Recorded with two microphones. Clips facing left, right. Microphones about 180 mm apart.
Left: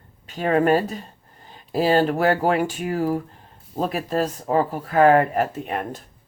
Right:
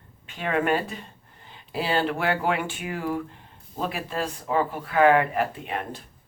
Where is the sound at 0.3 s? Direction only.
40° left (ahead or behind).